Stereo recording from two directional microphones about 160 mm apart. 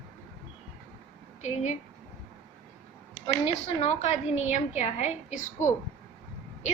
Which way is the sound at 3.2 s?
40° left (ahead or behind).